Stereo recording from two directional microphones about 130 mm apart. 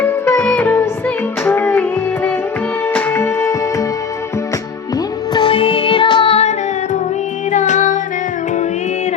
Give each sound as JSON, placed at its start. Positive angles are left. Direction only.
{"t": 0.0, "sound": "music", "side_deg": 20}
{"t": 4.9, "sound": "music", "side_deg": 35}
{"t": 7.5, "sound": "music", "side_deg": 70}